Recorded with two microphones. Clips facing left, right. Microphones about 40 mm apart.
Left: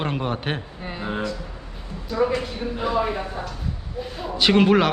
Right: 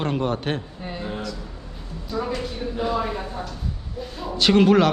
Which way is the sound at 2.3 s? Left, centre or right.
Centre.